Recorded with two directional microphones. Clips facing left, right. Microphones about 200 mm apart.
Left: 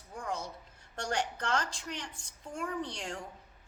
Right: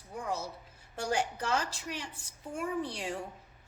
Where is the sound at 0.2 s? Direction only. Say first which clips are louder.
Right 2 dB; 5° right (ahead or behind).